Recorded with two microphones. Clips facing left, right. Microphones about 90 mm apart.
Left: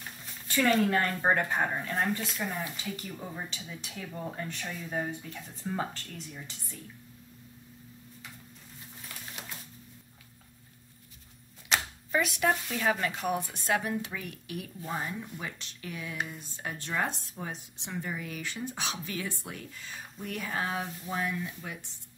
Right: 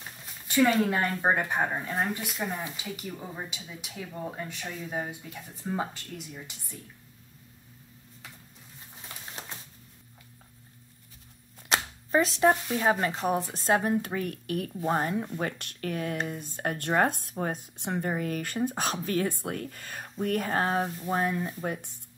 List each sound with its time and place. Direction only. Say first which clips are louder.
0.0 s speech: even; 5° right (ahead or behind)
11.7 s shuffling cards: right 4 dB; 35° right (ahead or behind)
12.7 s speech: right 4 dB; 25° right (ahead or behind); by 21.9 s 45° right (ahead or behind)